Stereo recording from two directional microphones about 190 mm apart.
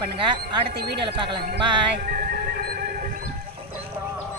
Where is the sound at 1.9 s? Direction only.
50° right (ahead or behind).